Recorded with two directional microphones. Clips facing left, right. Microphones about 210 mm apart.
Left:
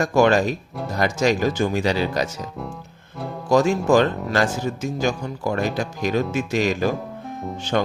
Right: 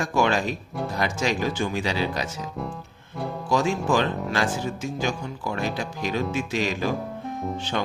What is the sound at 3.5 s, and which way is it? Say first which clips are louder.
Speech: left 6 dB; 45° left (ahead or behind).